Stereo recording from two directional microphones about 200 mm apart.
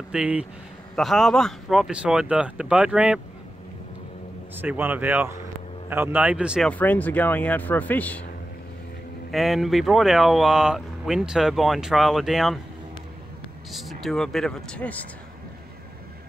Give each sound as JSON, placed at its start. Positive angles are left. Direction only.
{"t": 0.1, "sound": "speech", "side_deg": -5}
{"t": 4.6, "sound": "speech", "side_deg": -10}
{"t": 6.7, "sound": "speech", "side_deg": 10}
{"t": 9.3, "sound": "speech", "side_deg": 0}
{"t": 13.7, "sound": "speech", "side_deg": 0}